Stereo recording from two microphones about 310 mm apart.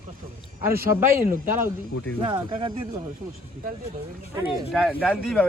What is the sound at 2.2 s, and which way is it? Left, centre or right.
Speech, centre.